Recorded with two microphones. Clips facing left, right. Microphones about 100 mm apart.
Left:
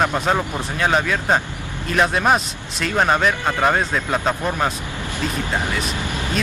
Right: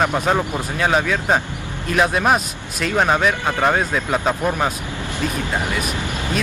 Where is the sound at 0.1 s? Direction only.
10° right (ahead or behind).